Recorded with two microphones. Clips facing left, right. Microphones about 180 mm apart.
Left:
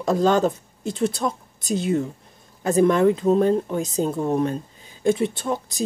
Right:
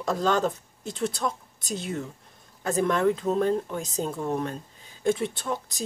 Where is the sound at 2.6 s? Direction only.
15° left (ahead or behind).